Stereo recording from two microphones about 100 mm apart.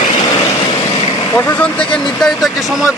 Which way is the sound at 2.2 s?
5° left (ahead or behind).